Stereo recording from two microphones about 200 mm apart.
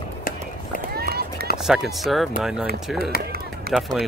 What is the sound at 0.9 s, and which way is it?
Run, 50° right (ahead or behind).